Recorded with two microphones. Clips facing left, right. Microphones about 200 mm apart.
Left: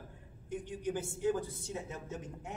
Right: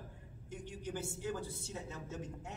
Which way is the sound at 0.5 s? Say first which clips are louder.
Left 6 dB; 15° left (ahead or behind).